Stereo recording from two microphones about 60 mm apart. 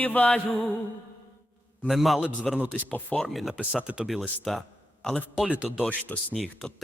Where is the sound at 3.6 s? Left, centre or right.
Centre.